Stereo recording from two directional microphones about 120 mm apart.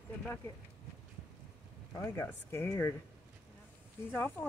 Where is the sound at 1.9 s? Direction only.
20° left (ahead or behind).